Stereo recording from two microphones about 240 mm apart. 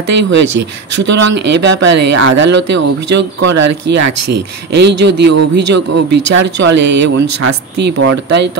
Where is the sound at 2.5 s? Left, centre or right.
Right.